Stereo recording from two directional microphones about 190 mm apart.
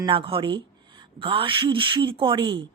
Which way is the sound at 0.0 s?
25° right (ahead or behind).